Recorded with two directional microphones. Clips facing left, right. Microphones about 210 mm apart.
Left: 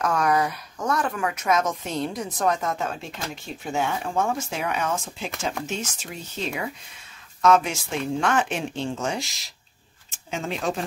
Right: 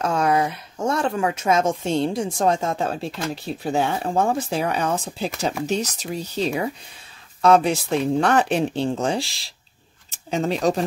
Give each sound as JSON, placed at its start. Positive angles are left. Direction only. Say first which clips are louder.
{"t": 0.0, "sound": "speech", "louder": "right 2 dB", "side_deg": -25}